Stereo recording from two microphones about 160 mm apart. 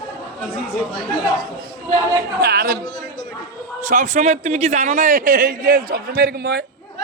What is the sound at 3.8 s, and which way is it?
A man's voice, 50° right (ahead or behind).